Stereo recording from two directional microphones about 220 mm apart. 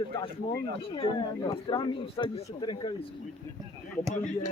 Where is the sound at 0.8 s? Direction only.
20° left (ahead or behind).